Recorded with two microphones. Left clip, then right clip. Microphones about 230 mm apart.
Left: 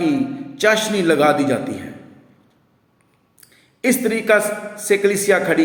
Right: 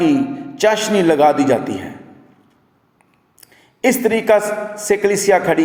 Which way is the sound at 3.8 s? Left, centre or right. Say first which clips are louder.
Right 3 dB; centre.